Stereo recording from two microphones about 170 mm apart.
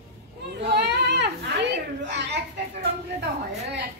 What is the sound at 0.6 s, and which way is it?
Children playing, 80° right.